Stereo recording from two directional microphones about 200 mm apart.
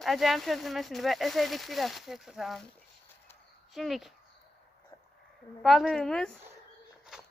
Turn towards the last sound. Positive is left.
turn(degrees=5)  # may be behind; listen again after turning